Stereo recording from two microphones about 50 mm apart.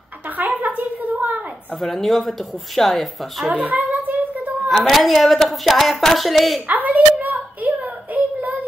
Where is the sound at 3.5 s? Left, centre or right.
Right.